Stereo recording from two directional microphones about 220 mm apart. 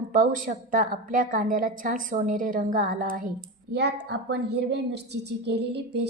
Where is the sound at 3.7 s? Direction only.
50° right (ahead or behind).